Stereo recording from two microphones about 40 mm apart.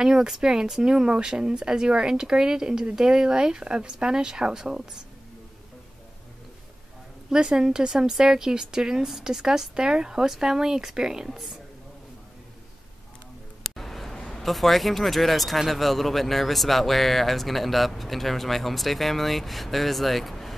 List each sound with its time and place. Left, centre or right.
0.0 s speech: centre
7.2 s speech: centre
11.2 s speech: centre
13.6 s a sound: centre
14.4 s speech: centre